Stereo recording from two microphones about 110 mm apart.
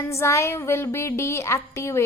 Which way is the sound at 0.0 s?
25° left (ahead or behind).